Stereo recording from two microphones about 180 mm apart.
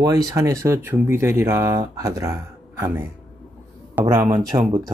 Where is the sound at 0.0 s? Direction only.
20° right (ahead or behind).